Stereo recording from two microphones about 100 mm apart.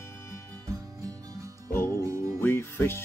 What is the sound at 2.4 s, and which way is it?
Music, 25° left (ahead or behind).